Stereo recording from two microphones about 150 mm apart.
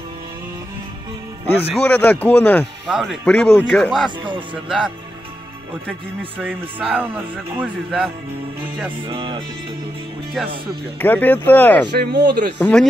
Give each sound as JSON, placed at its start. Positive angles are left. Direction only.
{"t": 1.8, "sound": "speech", "side_deg": 10}
{"t": 2.9, "sound": "speech", "side_deg": 0}
{"t": 6.3, "sound": "speech", "side_deg": -10}
{"t": 9.0, "sound": "speech", "side_deg": -35}
{"t": 11.0, "sound": "speech", "side_deg": 10}
{"t": 11.9, "sound": "speech", "side_deg": -90}
{"t": 12.5, "sound": "speech", "side_deg": 10}